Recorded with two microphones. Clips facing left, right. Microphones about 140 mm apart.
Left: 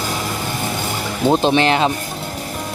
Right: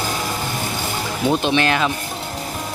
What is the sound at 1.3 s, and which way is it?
Speech, 30° left (ahead or behind).